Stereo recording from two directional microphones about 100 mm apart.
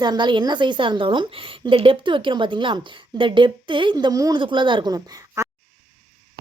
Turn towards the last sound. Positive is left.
turn(degrees=-30)  # may be behind; listen again after turning